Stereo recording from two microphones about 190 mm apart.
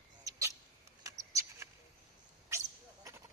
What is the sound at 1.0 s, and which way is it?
Mouse, 15° right (ahead or behind).